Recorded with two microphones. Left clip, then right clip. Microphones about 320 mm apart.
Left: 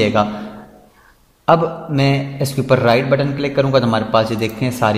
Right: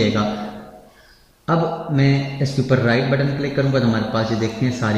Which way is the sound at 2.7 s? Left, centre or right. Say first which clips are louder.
Left 6 dB; left.